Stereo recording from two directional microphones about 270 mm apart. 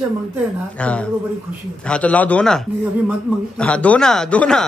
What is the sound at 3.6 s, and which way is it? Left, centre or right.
Speech, centre.